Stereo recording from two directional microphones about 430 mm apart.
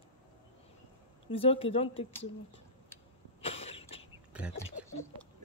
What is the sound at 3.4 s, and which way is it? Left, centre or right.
Cough, centre.